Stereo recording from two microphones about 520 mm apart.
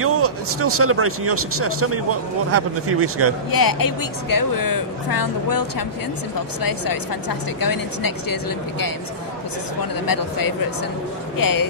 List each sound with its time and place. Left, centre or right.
0.0 s speech: right
3.5 s speech: left
10.0 s speech: left